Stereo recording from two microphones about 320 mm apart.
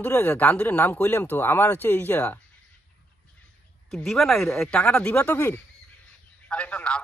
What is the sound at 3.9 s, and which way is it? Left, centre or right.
A man's voice, centre.